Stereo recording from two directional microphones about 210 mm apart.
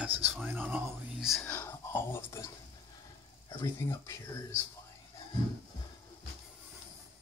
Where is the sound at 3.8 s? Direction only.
15° left (ahead or behind).